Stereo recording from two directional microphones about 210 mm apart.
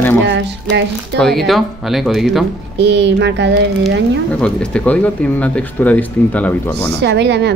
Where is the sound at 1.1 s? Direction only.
Centre (ahead or behind).